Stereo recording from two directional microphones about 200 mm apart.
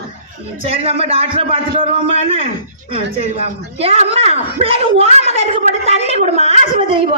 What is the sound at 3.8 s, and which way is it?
A woman's voice, 30° right (ahead or behind).